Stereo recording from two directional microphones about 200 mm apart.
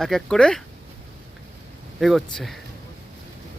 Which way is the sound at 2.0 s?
Centre (ahead or behind).